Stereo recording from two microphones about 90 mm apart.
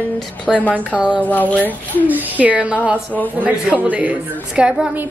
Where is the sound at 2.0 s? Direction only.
20° right (ahead or behind).